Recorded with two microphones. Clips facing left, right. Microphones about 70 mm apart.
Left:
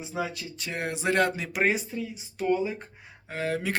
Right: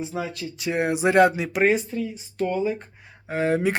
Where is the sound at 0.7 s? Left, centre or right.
Centre.